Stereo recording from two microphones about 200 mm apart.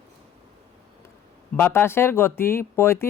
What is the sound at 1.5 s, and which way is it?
Speech, 10° left (ahead or behind).